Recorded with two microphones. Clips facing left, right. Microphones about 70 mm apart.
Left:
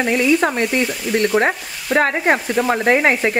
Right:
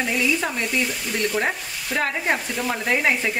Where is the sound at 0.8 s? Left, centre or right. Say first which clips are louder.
Left 7 dB; centre.